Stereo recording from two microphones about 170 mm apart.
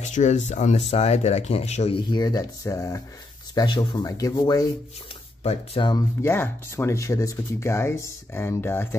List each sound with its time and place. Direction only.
0.0 s speech: 45° left (ahead or behind)
2.0 s speech: 25° left (ahead or behind)
5.4 s speech: 40° left (ahead or behind)
6.2 s speech: 15° left (ahead or behind)